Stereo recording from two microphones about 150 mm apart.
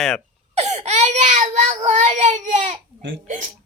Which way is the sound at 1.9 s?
50° right (ahead or behind).